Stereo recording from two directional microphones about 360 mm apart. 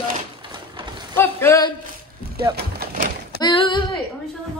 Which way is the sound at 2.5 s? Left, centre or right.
Right.